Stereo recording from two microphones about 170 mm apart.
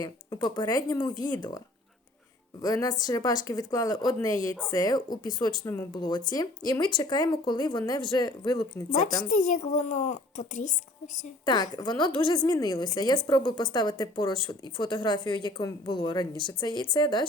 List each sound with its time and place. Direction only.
0.0 s a woman's voice: 25° left (ahead or behind)
5.6 s speech: 15° left (ahead or behind)
5.9 s a woman's voice: 25° left (ahead or behind)
9.3 s speech: 50° left (ahead or behind)
11.4 s a woman's voice: 25° left (ahead or behind)